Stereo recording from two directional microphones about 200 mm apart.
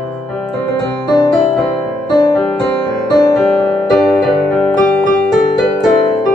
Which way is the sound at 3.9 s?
Centre (ahead or behind).